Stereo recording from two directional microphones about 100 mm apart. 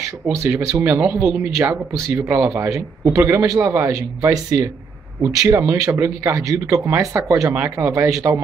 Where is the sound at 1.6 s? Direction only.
30° right (ahead or behind).